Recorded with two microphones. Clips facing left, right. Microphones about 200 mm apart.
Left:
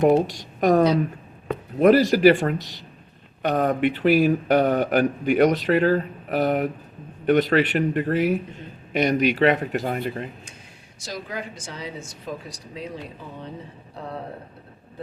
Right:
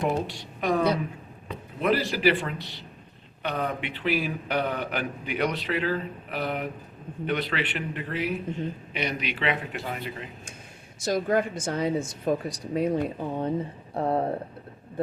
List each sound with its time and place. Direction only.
0.0 s speech: 45° left (ahead or behind)
11.0 s speech: 50° right (ahead or behind)